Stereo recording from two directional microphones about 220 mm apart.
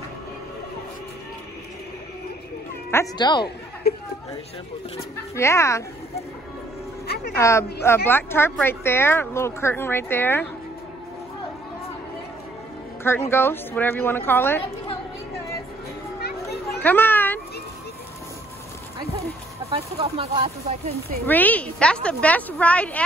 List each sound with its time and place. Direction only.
2.9 s speech: 15° left (ahead or behind)
3.9 s chatter: 45° left (ahead or behind)
5.3 s speech: 10° left (ahead or behind)
7.3 s speech: 15° left (ahead or behind)
13.3 s speech: 10° left (ahead or behind)
16.8 s a child's voice: 10° left (ahead or behind)
19.7 s speech: 25° right (ahead or behind)
21.3 s speech: 5° left (ahead or behind)